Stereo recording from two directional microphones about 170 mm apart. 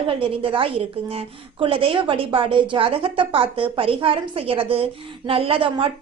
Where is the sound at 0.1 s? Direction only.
30° right (ahead or behind).